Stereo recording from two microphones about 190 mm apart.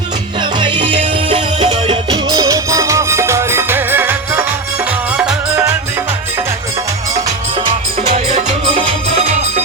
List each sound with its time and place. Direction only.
0.6 s music: 25° right (ahead or behind); by 5.6 s 5° right (ahead or behind)
8.1 s music: 35° right (ahead or behind)